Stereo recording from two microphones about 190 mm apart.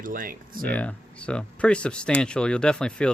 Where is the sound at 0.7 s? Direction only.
5° left (ahead or behind).